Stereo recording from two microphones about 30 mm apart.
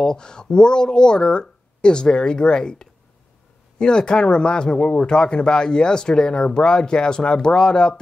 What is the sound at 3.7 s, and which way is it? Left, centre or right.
Speech, left.